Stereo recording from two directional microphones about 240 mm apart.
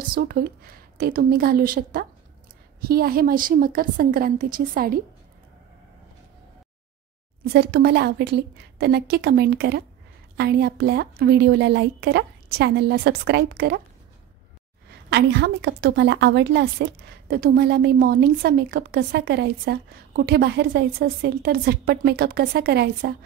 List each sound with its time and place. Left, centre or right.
0.1 s a woman's voice: right
7.4 s a woman's voice: right
15.0 s a woman's voice: right